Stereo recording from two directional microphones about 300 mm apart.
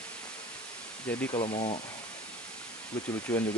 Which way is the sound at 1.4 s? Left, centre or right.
Left.